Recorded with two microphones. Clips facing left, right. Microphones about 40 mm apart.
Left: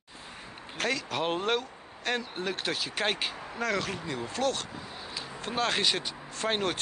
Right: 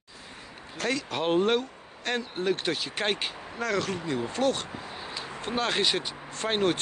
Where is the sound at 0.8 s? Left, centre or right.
Centre.